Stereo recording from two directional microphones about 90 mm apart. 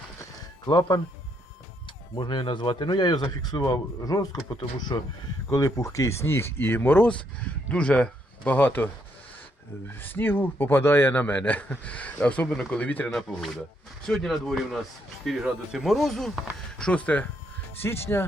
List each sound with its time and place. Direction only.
0.2 s music: 45° left (ahead or behind)
2.1 s speech: 55° left (ahead or behind)
3.7 s speech: 45° left (ahead or behind)
5.5 s a man's voice: 35° left (ahead or behind); by 8.9 s 20° left (ahead or behind)
9.9 s a man's voice: 20° left (ahead or behind)
13.1 s speech: 5° left (ahead or behind)
17.7 s a man's voice: 25° left (ahead or behind)